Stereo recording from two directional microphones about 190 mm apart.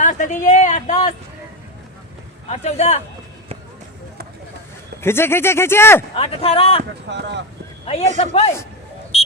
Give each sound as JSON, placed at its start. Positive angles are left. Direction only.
{"t": 0.0, "sound": "a sound", "side_deg": 40}
{"t": 2.5, "sound": "speech", "side_deg": 35}
{"t": 4.9, "sound": "speech", "side_deg": 10}
{"t": 6.1, "sound": "speech", "side_deg": 30}
{"t": 7.1, "sound": "speech", "side_deg": -65}
{"t": 8.2, "sound": "speech", "side_deg": 30}
{"t": 9.1, "sound": "a sound", "side_deg": 35}